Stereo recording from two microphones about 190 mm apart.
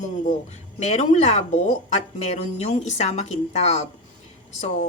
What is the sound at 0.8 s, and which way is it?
Speech, 35° left (ahead or behind).